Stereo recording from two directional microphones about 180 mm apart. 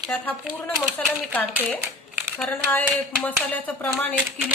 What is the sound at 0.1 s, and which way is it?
A woman's voice, 10° left (ahead or behind).